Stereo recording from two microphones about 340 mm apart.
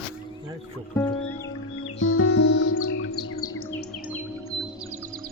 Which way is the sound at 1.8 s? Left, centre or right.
Left.